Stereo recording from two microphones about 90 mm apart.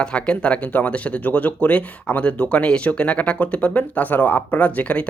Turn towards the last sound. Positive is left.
turn(degrees=15)  # may be behind; listen again after turning